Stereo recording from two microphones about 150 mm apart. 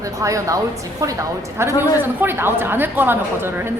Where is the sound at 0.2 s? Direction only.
20° right (ahead or behind).